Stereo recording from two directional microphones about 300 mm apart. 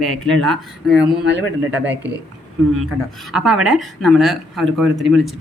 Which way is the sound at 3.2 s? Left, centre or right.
Centre.